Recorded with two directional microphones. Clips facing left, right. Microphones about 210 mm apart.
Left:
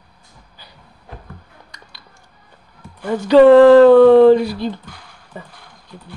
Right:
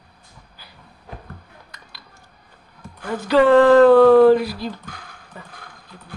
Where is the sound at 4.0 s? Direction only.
20° left (ahead or behind).